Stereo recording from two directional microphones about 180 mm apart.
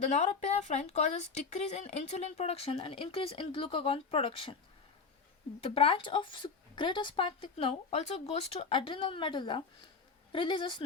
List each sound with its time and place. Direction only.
0.1 s speech: 40° left (ahead or behind)
5.6 s a woman's voice: 30° left (ahead or behind)